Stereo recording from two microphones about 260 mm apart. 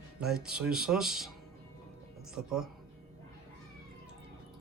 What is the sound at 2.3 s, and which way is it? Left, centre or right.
Speech, centre.